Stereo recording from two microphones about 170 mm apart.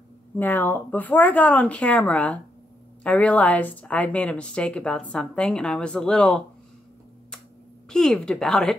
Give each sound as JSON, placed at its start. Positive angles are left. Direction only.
{"t": 0.4, "sound": "speech", "side_deg": 10}
{"t": 7.9, "sound": "speech", "side_deg": 5}